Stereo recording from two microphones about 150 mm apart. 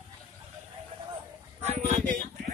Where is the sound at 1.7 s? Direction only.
50° right (ahead or behind).